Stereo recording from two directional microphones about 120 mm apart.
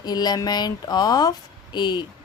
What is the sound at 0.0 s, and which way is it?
A woman's voice, 35° left (ahead or behind).